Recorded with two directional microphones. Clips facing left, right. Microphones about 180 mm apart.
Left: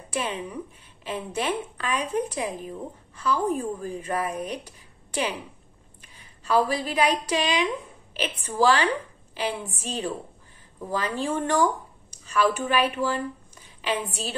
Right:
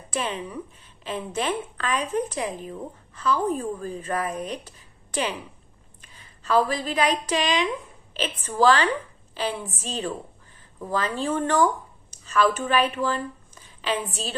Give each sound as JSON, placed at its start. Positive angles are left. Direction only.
{"t": 0.1, "sound": "a woman's voice", "side_deg": 10}